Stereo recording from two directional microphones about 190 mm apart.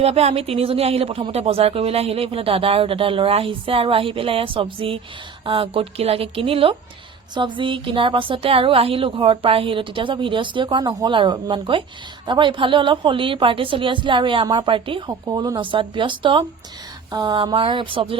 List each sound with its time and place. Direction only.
0.0 s speech: 35° right (ahead or behind)